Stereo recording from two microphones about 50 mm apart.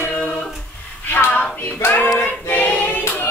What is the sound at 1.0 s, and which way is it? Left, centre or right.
Hands, left.